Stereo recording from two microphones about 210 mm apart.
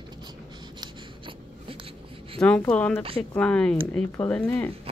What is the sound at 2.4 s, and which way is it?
Speech, 5° left (ahead or behind).